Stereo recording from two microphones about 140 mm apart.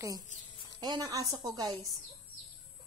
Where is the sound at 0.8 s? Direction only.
30° right (ahead or behind).